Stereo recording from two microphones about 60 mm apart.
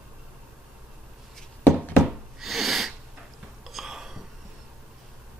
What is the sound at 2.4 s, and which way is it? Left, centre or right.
Snort, centre.